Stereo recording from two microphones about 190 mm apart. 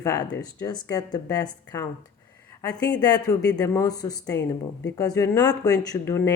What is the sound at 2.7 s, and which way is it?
Speech, 5° left (ahead or behind).